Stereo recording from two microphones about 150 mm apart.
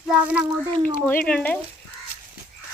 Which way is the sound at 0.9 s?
15° left (ahead or behind).